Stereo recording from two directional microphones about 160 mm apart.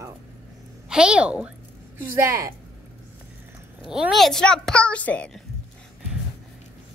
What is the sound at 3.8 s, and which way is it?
A child's voice, 5° right (ahead or behind).